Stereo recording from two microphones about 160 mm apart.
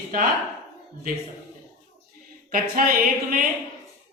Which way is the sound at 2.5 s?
65° right (ahead or behind).